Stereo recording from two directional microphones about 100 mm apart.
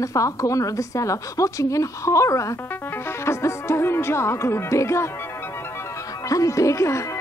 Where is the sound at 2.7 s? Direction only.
20° left (ahead or behind).